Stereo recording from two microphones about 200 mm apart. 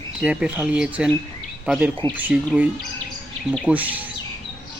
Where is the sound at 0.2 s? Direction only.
5° right (ahead or behind).